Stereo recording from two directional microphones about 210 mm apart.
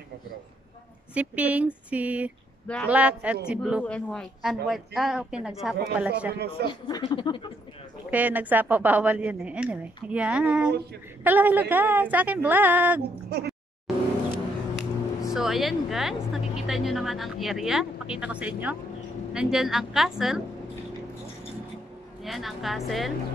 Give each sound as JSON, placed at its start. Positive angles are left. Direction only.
{"t": 1.1, "sound": "a woman's voice", "side_deg": -5}
{"t": 6.7, "sound": "speech", "side_deg": 20}
{"t": 8.1, "sound": "a woman's voice", "side_deg": -5}
{"t": 13.3, "sound": "speech", "side_deg": -50}
{"t": 14.8, "sound": "speech", "side_deg": 0}
{"t": 22.2, "sound": "speech", "side_deg": 0}